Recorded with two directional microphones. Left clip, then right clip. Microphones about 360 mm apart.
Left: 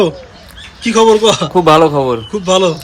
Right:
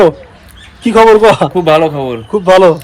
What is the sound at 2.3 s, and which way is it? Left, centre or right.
Speech, centre.